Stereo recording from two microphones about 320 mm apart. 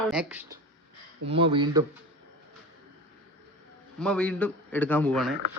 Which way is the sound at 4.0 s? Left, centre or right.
Centre.